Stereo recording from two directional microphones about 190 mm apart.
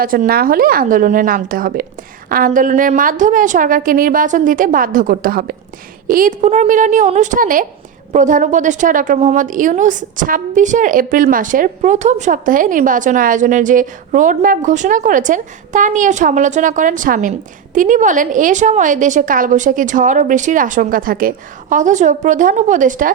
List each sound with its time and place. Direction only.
0.0 s a woman's voice: 50° right (ahead or behind)